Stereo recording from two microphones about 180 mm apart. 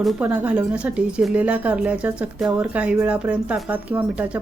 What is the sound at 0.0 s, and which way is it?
Speech, 5° right (ahead or behind).